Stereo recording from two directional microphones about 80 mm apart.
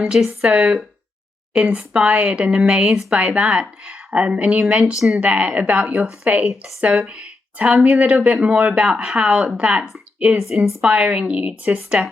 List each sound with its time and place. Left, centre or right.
0.0 s speech: centre
4.9 s speech: centre
5.2 s speech: centre